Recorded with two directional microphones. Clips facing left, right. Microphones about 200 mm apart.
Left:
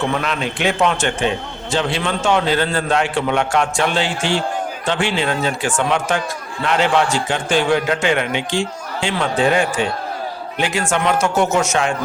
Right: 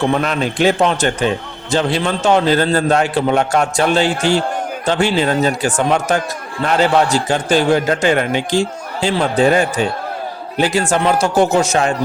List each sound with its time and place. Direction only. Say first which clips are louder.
0.0 s a man's voice: right 4 dB; 40° right (ahead or behind)